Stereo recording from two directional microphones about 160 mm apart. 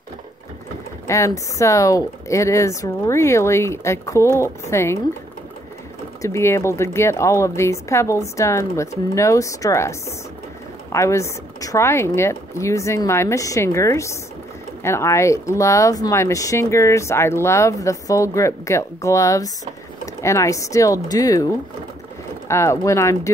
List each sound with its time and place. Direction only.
1.0 s speech: 20° left (ahead or behind)
6.2 s speech: 15° left (ahead or behind)
22.5 s speech: 15° left (ahead or behind)